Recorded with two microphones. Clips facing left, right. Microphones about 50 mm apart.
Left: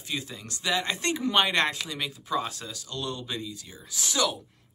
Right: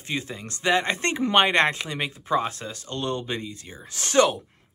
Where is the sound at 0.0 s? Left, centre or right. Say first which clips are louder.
Right 4 dB; right.